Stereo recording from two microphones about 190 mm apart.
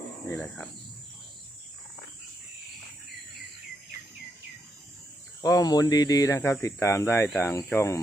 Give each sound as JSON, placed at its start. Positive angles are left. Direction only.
{"t": 0.3, "sound": "speech", "side_deg": 5}
{"t": 5.4, "sound": "speech", "side_deg": 20}